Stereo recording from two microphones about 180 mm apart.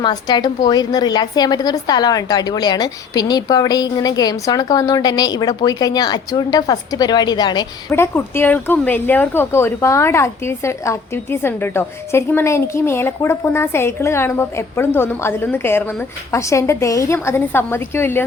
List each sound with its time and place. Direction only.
0.0 s a woman's voice: 25° left (ahead or behind)
7.9 s speech: 15° left (ahead or behind)